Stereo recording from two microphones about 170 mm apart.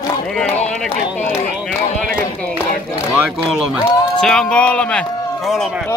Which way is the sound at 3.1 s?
5° right (ahead or behind).